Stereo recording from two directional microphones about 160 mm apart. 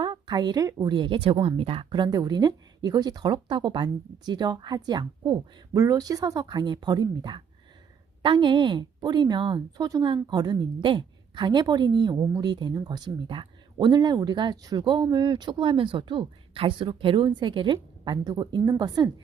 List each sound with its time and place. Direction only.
0.0 s a woman's voice: 25° right (ahead or behind)